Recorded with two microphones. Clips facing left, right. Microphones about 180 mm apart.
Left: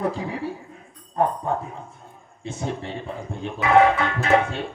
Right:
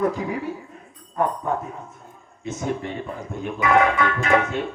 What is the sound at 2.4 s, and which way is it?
Speech, 30° left (ahead or behind).